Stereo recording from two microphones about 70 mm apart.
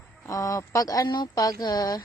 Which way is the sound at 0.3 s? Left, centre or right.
Left.